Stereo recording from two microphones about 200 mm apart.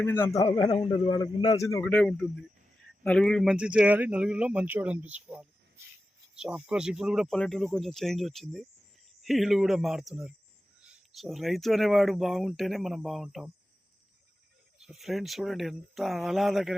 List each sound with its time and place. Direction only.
0.0 s speech: 10° left (ahead or behind)
0.4 s a man's voice: 25° left (ahead or behind)
1.6 s speech: 10° left (ahead or behind)
14.8 s speech: centre (ahead or behind)